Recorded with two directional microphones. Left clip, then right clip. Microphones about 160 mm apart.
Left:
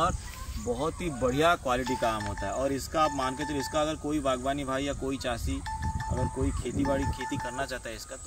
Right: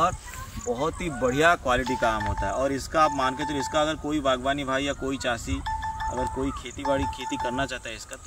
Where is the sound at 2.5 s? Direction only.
5° right (ahead or behind).